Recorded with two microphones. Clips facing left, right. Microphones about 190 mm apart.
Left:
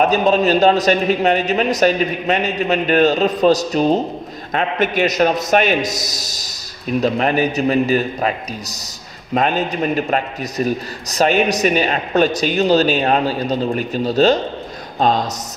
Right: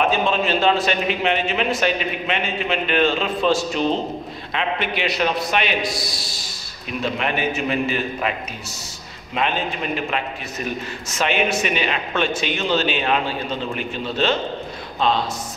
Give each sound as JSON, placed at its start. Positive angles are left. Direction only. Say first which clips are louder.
{"t": 0.0, "sound": "a man's voice", "louder": "left 6 dB", "side_deg": 40}